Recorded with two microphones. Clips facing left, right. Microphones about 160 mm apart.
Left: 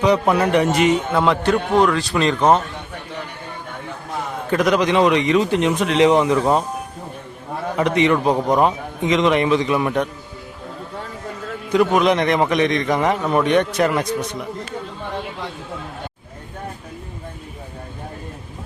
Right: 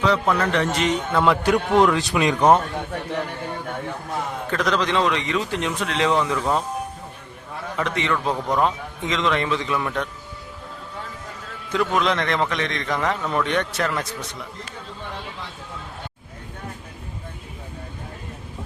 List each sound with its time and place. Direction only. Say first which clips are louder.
0.0 s a man's voice: left 4 dB; 15° left (ahead or behind)
1.8 s speech: left 1 dB; 20° right (ahead or behind)
4.5 s speech: left 6 dB; 15° left (ahead or behind)
7.8 s a man's voice: left 7 dB; 15° left (ahead or behind)
11.7 s a man's voice: left 6 dB; 15° left (ahead or behind)